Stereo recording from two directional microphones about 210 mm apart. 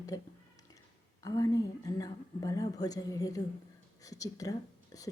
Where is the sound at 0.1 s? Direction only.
15° left (ahead or behind).